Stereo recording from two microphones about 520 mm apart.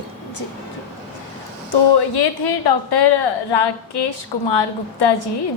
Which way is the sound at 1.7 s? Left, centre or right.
Left.